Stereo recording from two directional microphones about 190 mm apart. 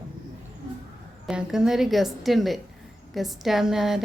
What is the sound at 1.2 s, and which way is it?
A woman's voice, centre (ahead or behind).